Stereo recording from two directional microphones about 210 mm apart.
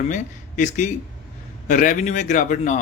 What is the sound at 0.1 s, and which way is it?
A man's voice, 35° left (ahead or behind).